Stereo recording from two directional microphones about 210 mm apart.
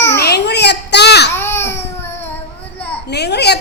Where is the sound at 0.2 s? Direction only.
50° left (ahead or behind).